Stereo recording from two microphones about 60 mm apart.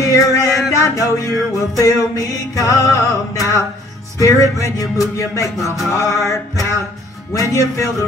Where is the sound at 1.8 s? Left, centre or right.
Left.